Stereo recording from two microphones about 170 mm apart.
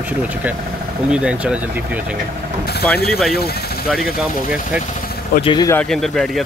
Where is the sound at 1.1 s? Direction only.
5° right (ahead or behind).